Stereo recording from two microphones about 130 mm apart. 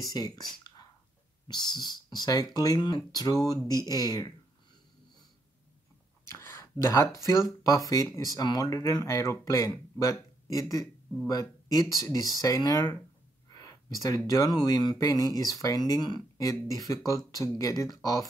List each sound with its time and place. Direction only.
0.0 s speech: 30° left (ahead or behind)
6.2 s speech: 20° left (ahead or behind)
13.5 s a sound: 30° left (ahead or behind)
14.0 s speech: 25° left (ahead or behind)